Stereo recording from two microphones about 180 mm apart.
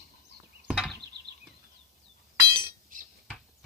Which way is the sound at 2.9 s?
50° right (ahead or behind).